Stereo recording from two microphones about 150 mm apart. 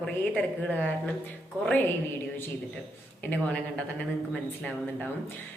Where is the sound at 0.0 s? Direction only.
10° left (ahead or behind).